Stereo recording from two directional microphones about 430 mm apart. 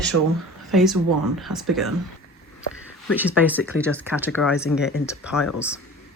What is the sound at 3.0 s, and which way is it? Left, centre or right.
Speech, centre.